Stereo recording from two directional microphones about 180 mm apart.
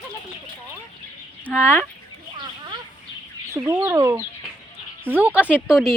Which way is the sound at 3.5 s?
15° right (ahead or behind).